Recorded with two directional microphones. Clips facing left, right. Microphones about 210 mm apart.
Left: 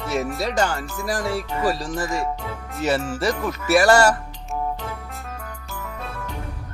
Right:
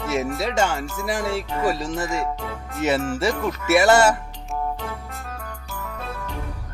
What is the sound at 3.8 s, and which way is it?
Speech, 20° right (ahead or behind).